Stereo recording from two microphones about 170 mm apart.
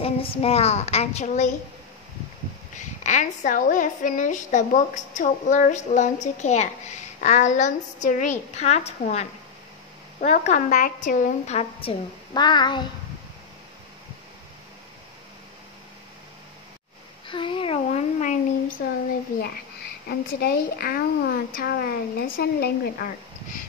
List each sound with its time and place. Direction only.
0.0 s a woman's voice: 35° left (ahead or behind)
2.8 s a woman's voice: 45° left (ahead or behind); by 12.8 s 25° left (ahead or behind)
17.3 s a woman's voice: 30° left (ahead or behind); by 18.8 s 45° left (ahead or behind)
20.1 s a woman's voice: 70° left (ahead or behind)